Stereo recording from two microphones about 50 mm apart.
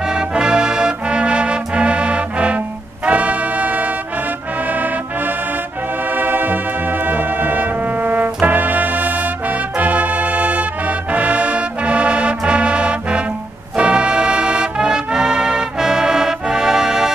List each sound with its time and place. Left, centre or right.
0.1 s music: centre
6.1 s music: right
7.1 s brass instrument: right
9.8 s music: right; by 17.1 s centre